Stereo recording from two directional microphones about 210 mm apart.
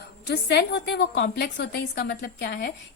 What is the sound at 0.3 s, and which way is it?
A woman's voice, 55° left (ahead or behind).